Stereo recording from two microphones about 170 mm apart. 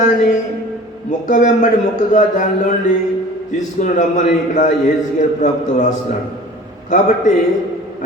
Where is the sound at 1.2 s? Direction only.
50° left (ahead or behind).